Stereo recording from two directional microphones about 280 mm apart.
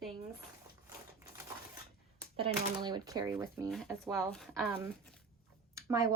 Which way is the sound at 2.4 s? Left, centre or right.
Centre.